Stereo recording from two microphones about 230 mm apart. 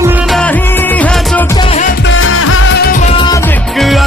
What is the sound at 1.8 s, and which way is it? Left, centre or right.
Music, left.